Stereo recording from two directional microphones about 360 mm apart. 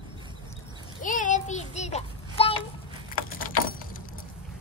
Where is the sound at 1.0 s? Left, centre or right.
Left.